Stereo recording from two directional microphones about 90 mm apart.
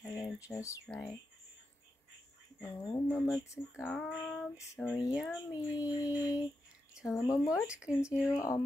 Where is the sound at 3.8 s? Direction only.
15° left (ahead or behind).